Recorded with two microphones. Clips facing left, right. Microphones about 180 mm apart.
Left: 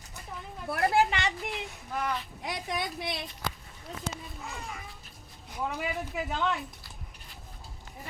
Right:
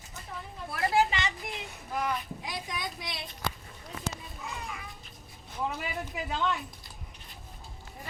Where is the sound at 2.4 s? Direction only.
60° left (ahead or behind).